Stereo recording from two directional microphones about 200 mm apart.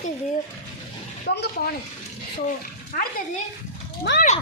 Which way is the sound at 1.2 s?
55° left (ahead or behind).